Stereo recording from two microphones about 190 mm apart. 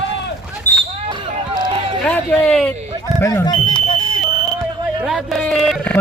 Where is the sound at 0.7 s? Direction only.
10° left (ahead or behind).